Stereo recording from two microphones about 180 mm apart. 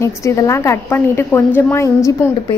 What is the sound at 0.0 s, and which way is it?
A woman's voice, 15° left (ahead or behind).